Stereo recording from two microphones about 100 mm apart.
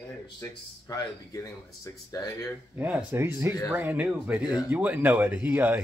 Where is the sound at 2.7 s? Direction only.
15° right (ahead or behind).